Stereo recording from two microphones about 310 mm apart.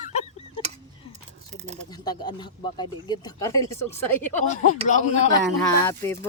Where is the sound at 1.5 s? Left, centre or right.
Right.